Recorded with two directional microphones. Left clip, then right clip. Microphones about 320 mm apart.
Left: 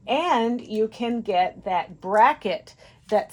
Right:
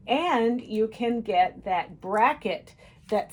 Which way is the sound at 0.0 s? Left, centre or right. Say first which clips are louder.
Left 2 dB; left.